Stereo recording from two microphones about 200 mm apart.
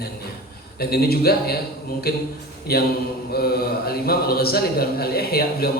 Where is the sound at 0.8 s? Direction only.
50° left (ahead or behind).